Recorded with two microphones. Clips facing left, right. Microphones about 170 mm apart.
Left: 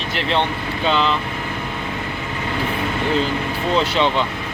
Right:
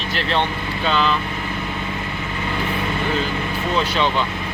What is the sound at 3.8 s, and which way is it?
Speech, 25° left (ahead or behind).